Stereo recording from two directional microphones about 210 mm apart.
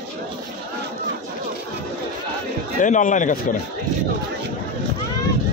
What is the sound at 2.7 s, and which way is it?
Speech, 35° left (ahead or behind).